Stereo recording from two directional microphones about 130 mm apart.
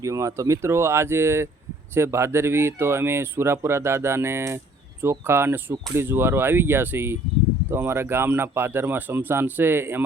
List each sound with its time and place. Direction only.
0.0 s speech: 25° right (ahead or behind)